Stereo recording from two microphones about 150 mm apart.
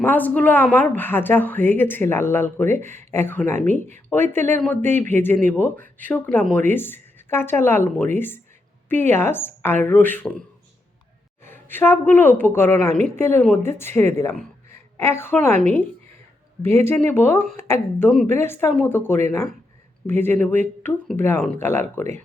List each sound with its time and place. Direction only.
0.0 s speech: 10° left (ahead or behind)
11.4 s a woman's voice: 15° left (ahead or behind)
16.6 s speech: 15° left (ahead or behind)
18.1 s a woman's voice: 5° left (ahead or behind)